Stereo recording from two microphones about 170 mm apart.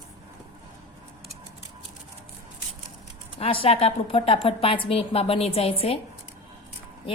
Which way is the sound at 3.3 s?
30° left (ahead or behind).